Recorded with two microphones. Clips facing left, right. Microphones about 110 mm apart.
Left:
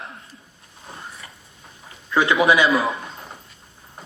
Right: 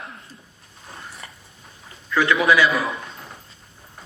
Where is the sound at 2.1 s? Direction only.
25° left (ahead or behind).